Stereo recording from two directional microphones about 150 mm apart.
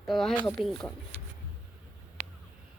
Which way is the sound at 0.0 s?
Centre (ahead or behind).